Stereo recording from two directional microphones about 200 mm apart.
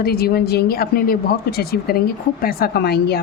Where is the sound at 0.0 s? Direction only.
50° left (ahead or behind).